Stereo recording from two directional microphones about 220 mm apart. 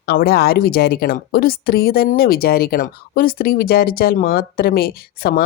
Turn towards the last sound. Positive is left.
turn(degrees=45)  # may be behind; listen again after turning